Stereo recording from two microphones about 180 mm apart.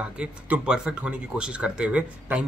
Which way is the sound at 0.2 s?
5° right (ahead or behind).